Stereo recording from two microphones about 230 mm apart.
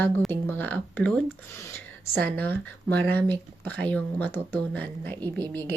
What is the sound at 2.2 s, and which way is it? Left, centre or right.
Speech, centre.